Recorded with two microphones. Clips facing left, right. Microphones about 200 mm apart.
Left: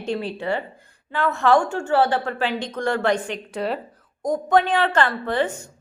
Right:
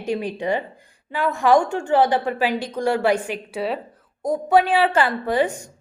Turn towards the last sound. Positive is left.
turn(degrees=-15)  # may be behind; listen again after turning